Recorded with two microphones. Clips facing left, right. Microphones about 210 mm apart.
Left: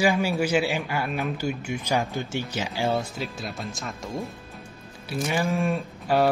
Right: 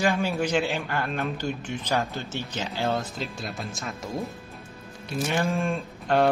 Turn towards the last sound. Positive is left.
turn(degrees=0)  # may be behind; listen again after turning